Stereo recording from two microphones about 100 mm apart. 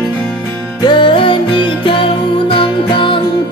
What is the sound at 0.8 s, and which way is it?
Music, 60° left (ahead or behind).